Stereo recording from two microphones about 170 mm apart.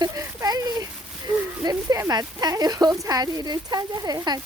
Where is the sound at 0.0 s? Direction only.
20° right (ahead or behind).